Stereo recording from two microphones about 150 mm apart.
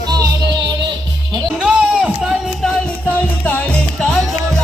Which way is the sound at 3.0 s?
10° left (ahead or behind).